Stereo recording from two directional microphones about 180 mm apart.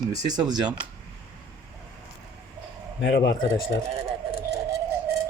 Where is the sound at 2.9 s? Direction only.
70° left (ahead or behind).